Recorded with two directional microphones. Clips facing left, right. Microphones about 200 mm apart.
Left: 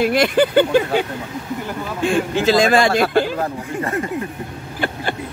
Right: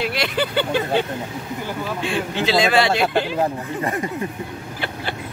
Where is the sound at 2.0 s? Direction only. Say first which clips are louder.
Left 7 dB; 45° left (ahead or behind).